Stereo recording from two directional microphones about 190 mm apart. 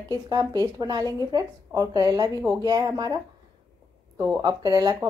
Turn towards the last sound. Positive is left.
turn(degrees=-20)  # may be behind; listen again after turning